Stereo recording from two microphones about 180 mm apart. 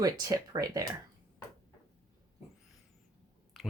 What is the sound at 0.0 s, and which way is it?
Speech, 20° right (ahead or behind).